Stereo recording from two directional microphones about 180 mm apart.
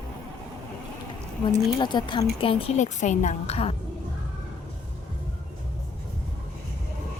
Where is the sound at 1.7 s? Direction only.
25° left (ahead or behind).